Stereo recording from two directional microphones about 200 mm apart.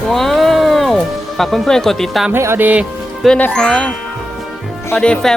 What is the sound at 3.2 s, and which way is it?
Speech, 5° left (ahead or behind).